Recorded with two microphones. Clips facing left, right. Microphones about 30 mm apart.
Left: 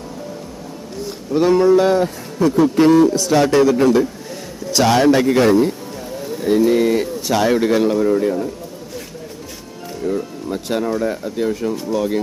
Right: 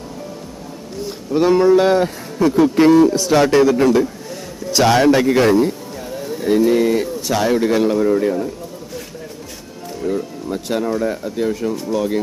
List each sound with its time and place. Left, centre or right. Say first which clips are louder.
1.3 s speech: even; centre
1.8 s a man's voice: right 1 dB; right; by 8.4 s centre
10.0 s speech: even; centre